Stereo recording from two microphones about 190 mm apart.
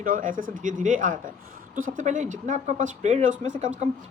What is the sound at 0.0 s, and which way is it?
Speech, 45° right (ahead or behind).